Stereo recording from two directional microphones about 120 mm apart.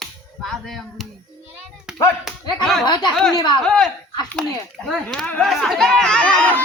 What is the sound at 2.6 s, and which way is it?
Speech, 5° left (ahead or behind).